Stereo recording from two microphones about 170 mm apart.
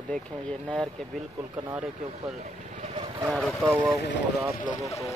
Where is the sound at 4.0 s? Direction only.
90° left.